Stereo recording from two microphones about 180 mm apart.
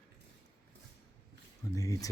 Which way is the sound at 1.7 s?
20° left (ahead or behind).